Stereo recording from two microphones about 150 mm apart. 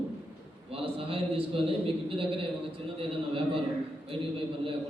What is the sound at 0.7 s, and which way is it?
Speech, 40° right (ahead or behind).